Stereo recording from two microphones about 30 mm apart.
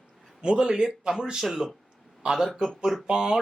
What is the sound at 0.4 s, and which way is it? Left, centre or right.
Speech, right.